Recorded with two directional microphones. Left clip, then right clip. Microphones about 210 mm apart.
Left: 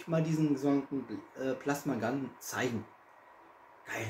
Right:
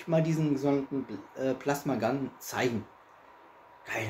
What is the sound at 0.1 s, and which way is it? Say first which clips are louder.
Speech: right 3 dB; 25° right (ahead or behind).